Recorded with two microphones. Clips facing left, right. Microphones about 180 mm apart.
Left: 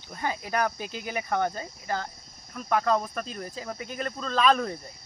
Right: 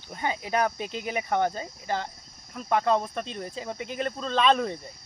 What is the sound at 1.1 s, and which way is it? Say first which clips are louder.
Speech: right 2 dB; 25° right (ahead or behind).